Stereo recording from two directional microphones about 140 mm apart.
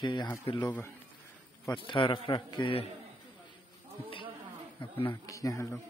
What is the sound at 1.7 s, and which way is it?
A man's voice, 35° left (ahead or behind).